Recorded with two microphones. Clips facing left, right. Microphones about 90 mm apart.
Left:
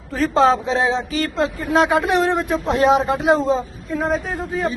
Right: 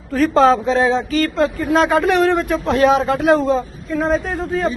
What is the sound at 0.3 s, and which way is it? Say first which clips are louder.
Speech: right 2 dB; 20° left (ahead or behind).